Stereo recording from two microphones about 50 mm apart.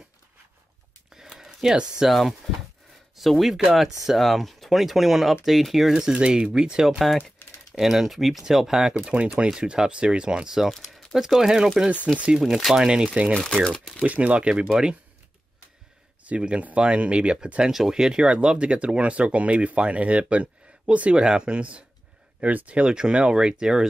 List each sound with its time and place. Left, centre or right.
1.3 s a sound: centre
2.0 s speech: centre
10.7 s a sound: centre
11.1 s speech: centre
16.3 s speech: right
17.6 s speech: centre